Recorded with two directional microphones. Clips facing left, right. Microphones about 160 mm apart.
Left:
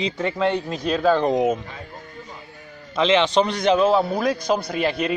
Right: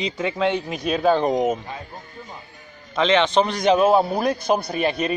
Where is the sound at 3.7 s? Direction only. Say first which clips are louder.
Right 2 dB; 20° right (ahead or behind).